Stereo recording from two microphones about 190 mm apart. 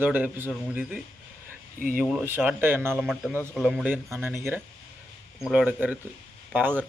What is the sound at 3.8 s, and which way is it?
Speech, 10° right (ahead or behind).